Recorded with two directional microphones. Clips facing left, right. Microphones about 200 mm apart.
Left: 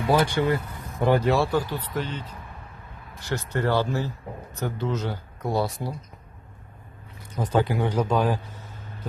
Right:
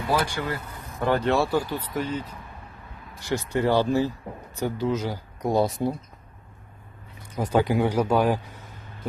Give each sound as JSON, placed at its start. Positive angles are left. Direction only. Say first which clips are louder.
{"t": 0.1, "sound": "speech", "louder": "left 5 dB", "side_deg": 25}
{"t": 1.0, "sound": "speech", "louder": "left 2 dB", "side_deg": 15}
{"t": 1.3, "sound": "speech", "louder": "even", "side_deg": -5}
{"t": 7.3, "sound": "speech", "louder": "right 2 dB", "side_deg": -10}